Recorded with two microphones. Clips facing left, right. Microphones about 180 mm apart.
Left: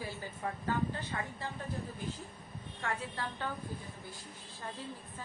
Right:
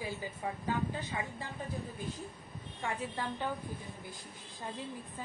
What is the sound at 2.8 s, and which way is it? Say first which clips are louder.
Speech: right 1 dB; 15° right (ahead or behind).